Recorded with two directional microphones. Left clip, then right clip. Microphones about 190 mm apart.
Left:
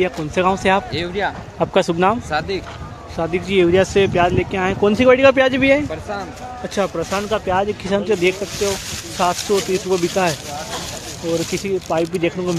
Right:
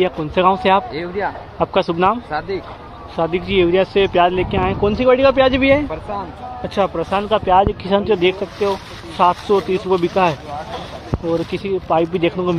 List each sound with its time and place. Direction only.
0.0 s speech: 15° left (ahead or behind)
0.9 s speech: 25° left (ahead or behind)
3.2 s speech: 10° left (ahead or behind)
3.4 s speech: 25° left (ahead or behind)
4.1 s speech: 5° left (ahead or behind)
4.8 s speech: 45° left (ahead or behind)
5.5 s speech: 15° left (ahead or behind)
11.5 s speech: 15° left (ahead or behind)
12.0 s speech: 5° left (ahead or behind)